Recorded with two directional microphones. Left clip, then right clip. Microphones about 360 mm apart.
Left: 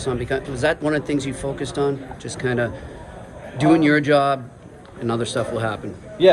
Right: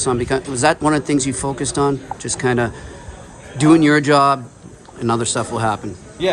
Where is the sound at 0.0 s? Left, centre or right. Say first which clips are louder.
Right 5 dB; centre.